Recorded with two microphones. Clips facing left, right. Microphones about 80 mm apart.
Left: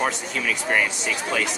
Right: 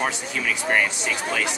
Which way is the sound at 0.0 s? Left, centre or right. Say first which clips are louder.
Left 1 dB; centre.